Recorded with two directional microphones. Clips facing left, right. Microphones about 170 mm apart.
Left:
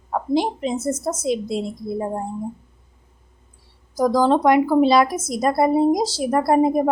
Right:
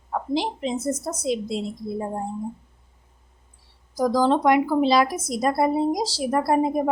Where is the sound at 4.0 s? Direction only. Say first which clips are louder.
Left 3 dB; 50° left (ahead or behind).